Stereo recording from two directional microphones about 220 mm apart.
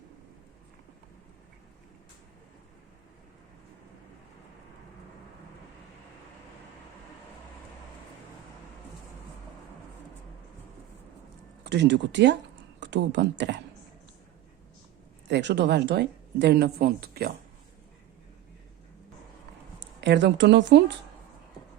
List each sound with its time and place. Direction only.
11.6 s speech: 50° right (ahead or behind)
15.3 s speech: 55° right (ahead or behind)
20.0 s speech: 55° right (ahead or behind)